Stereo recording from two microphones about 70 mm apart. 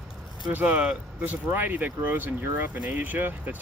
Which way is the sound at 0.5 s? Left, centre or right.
Right.